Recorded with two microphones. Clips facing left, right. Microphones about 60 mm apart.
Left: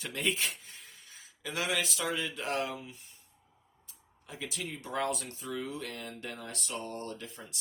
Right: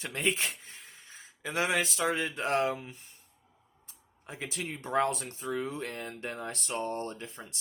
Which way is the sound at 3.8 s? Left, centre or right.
Right.